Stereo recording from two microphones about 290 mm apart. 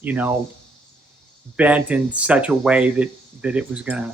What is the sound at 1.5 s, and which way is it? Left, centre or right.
Speech, centre.